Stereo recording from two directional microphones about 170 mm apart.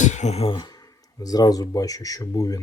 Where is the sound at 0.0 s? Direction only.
45° left (ahead or behind).